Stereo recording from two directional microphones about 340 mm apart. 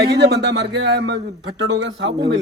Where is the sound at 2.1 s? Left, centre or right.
Centre.